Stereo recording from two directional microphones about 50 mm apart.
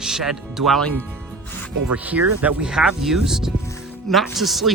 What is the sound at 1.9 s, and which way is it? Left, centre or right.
Speech, right.